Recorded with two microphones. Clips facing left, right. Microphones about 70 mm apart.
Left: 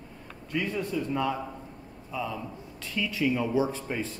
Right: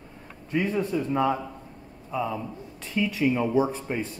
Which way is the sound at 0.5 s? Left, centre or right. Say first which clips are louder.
Right 4 dB; right.